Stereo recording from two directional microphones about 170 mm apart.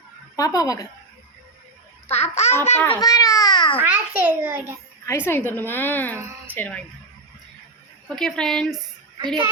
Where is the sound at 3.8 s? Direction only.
10° right (ahead or behind).